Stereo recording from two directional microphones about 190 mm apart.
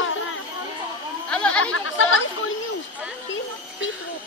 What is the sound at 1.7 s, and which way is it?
Chatter, 90° left.